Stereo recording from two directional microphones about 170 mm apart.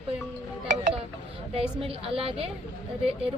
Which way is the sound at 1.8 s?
35° right (ahead or behind).